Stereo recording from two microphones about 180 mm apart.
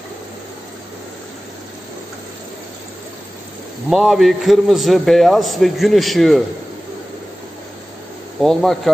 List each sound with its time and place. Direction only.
3.9 s a man's voice: centre (ahead or behind)
8.4 s a man's voice: centre (ahead or behind)